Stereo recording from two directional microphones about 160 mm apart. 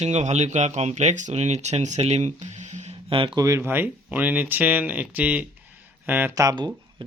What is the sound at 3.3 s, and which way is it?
Speech, 20° right (ahead or behind).